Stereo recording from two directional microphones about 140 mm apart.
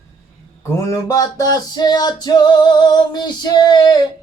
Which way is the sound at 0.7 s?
20° left (ahead or behind).